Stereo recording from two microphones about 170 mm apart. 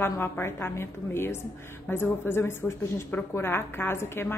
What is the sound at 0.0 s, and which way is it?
A woman's voice, 15° left (ahead or behind).